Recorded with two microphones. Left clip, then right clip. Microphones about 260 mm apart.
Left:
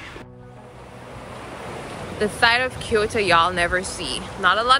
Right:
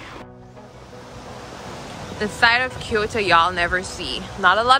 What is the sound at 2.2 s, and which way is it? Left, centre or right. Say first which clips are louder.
Speech: right 1 dB; centre.